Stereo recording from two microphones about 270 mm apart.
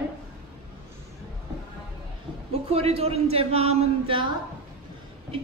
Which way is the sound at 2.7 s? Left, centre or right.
Right.